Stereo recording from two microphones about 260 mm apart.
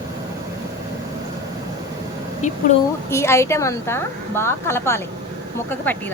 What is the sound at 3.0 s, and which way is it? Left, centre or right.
A woman's voice, centre.